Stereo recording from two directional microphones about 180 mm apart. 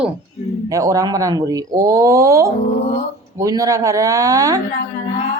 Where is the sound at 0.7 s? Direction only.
20° right (ahead or behind).